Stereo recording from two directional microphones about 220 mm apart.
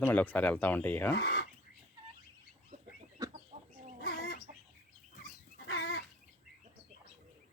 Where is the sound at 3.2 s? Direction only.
15° right (ahead or behind).